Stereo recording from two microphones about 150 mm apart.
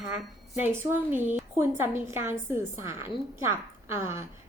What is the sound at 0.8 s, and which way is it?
A woman's voice, 15° right (ahead or behind).